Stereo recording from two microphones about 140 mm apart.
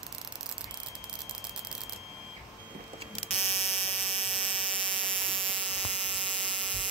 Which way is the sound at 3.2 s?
45° left (ahead or behind).